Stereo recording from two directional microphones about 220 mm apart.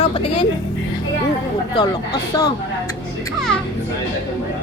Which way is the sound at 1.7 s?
20° left (ahead or behind).